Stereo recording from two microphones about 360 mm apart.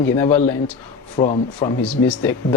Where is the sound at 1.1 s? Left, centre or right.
Centre.